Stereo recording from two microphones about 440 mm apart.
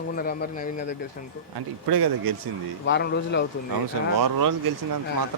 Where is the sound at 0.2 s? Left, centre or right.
Centre.